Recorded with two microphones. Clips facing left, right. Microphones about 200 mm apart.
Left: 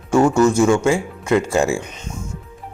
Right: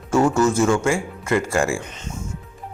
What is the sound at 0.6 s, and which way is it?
A man's voice, 15° left (ahead or behind).